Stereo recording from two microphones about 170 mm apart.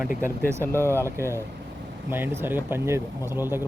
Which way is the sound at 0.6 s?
15° left (ahead or behind).